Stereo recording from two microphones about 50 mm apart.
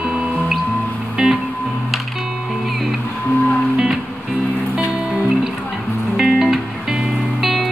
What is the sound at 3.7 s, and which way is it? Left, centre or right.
Music, centre.